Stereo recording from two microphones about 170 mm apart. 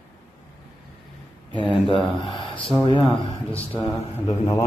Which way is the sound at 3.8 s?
15° left (ahead or behind).